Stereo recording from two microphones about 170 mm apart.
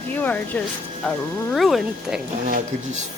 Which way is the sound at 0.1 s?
10° left (ahead or behind).